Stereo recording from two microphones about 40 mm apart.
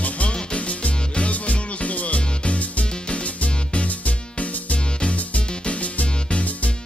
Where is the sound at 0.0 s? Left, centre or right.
Left.